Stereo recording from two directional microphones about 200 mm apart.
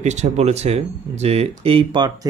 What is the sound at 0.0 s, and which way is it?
Speech, 35° right (ahead or behind).